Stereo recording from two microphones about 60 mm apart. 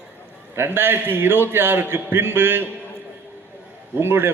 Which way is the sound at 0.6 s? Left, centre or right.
Right.